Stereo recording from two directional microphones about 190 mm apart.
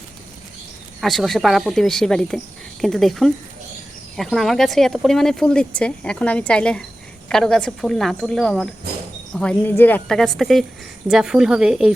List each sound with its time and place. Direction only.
1.0 s speech: centre (ahead or behind)